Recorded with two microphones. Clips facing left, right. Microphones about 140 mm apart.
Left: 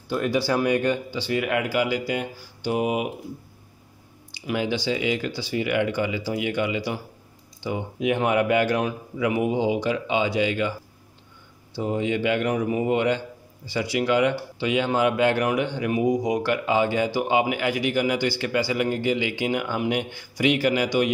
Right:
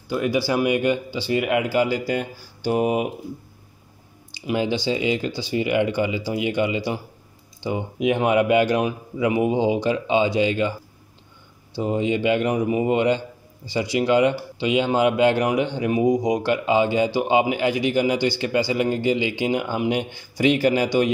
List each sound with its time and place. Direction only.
0.1 s speech: 5° right (ahead or behind)
1.3 s speech: 20° right (ahead or behind); by 3.1 s 40° right (ahead or behind)
4.5 s speech: 25° right (ahead or behind)
11.7 s speech: 25° right (ahead or behind)